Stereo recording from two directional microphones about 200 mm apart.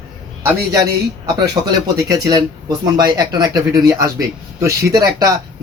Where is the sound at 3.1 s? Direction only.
20° right (ahead or behind).